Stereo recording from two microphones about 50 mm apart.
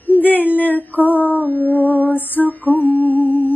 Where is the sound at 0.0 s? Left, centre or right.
Left.